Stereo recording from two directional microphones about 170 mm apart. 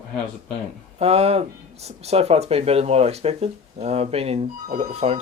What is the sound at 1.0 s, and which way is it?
Speech, 35° right (ahead or behind).